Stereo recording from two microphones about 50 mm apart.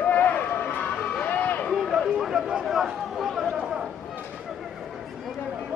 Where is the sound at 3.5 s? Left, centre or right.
Centre.